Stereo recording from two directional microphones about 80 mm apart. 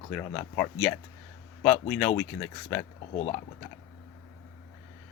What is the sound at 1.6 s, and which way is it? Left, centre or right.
Speech, centre.